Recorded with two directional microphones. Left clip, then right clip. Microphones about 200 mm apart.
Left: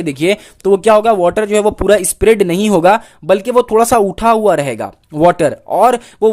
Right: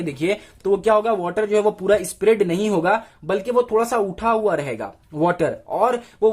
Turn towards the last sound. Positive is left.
turn(degrees=45)  # may be behind; listen again after turning